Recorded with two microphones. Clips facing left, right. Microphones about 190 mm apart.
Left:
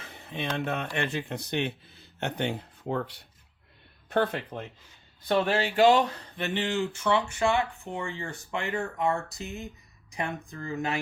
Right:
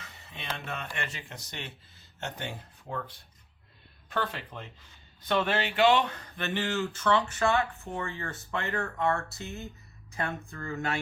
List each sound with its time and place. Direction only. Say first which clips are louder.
0.1 s speech: left 8 dB; 55° left (ahead or behind); by 3.2 s 75° left (ahead or behind)
4.1 s speech: left 6 dB; 55° left (ahead or behind)
5.3 s speech: left 3 dB; 35° left (ahead or behind); by 11.0 s 15° left (ahead or behind)